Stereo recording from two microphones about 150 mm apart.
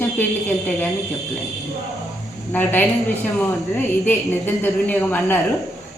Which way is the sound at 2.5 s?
10° left (ahead or behind).